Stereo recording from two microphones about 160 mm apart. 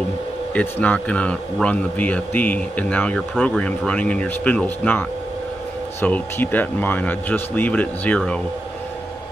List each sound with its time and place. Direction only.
0.6 s speech: 10° left (ahead or behind)